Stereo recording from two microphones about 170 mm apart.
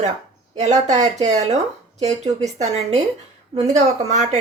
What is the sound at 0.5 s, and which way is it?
A woman's voice, 45° right (ahead or behind).